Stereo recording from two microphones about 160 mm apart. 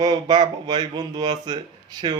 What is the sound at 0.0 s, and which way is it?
Speech, 25° right (ahead or behind).